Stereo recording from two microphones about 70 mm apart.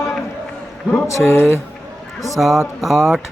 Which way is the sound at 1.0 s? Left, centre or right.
Left.